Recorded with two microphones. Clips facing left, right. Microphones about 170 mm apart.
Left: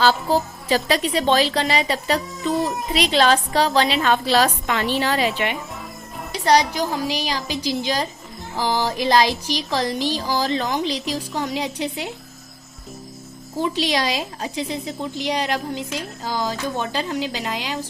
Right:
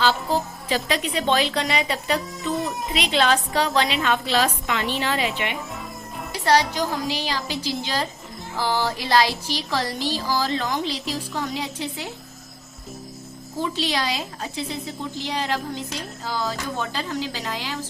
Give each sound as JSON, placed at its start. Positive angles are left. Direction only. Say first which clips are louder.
{"t": 0.7, "sound": "a woman's voice", "louder": "left 4 dB", "side_deg": 35}
{"t": 6.4, "sound": "music", "louder": "left 2 dB", "side_deg": 15}
{"t": 13.6, "sound": "music", "louder": "left 4 dB", "side_deg": 15}
{"t": 16.0, "sound": "speech", "louder": "left 2 dB", "side_deg": 15}